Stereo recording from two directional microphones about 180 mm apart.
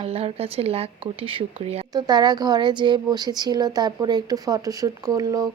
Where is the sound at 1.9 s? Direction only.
20° right (ahead or behind).